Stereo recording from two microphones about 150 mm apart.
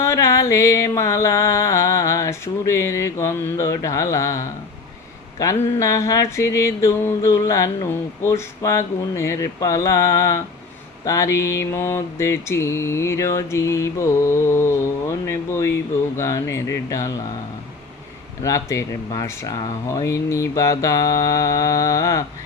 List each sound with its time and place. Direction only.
0.0 s mantra: 20° left (ahead or behind)
18.4 s mantra: 20° left (ahead or behind)